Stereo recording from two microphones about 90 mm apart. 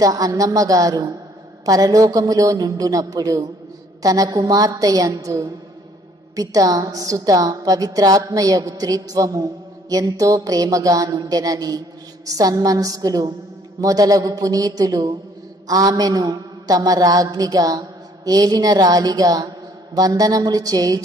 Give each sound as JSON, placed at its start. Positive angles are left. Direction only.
{"t": 0.0, "sound": "a woman's voice", "side_deg": -40}